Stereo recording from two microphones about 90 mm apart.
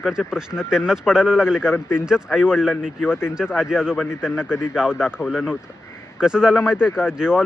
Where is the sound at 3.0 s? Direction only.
25° left (ahead or behind).